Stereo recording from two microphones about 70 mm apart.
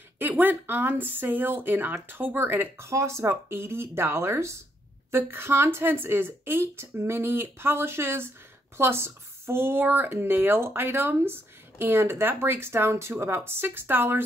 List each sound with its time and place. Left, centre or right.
0.4 s speech: right
2.9 s speech: right